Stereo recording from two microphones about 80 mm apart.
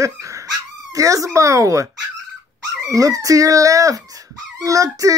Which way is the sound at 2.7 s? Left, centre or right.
Right.